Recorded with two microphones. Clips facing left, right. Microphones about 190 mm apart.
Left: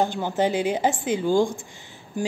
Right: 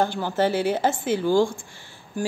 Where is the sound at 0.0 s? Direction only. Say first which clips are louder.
Even; 15° left (ahead or behind).